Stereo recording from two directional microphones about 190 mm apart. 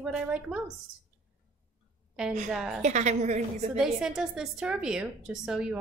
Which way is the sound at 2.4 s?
5° right (ahead or behind).